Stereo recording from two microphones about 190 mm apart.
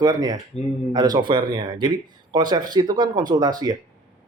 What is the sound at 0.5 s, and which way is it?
Speech, 35° left (ahead or behind).